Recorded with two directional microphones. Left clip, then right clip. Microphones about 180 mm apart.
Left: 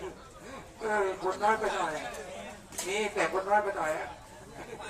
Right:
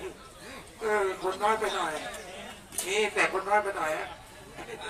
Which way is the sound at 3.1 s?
55° left (ahead or behind).